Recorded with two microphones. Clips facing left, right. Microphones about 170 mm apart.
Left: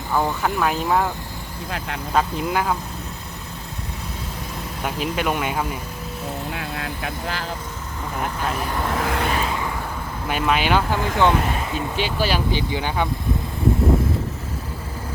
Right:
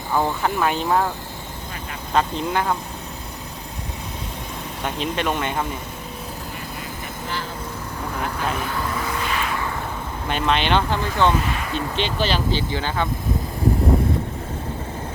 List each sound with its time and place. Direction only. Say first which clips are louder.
0.1 s speech: even; 15° right (ahead or behind)
0.4 s speech: even; centre (ahead or behind)
2.1 s speech: even; 5° left (ahead or behind)
4.8 s speech: even; 5° left (ahead or behind)
6.5 s speech: left 4 dB; 90° left
8.9 s vehicle: left 3 dB; 65° left (ahead or behind)
9.3 s vehicle: left 1 dB; 25° left (ahead or behind)
10.2 s speech: even; 5° left (ahead or behind)